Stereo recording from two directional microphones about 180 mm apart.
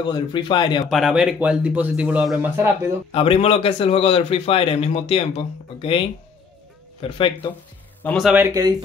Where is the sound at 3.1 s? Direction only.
30° left (ahead or behind).